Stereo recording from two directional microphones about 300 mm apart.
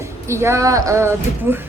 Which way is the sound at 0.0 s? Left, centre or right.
Centre.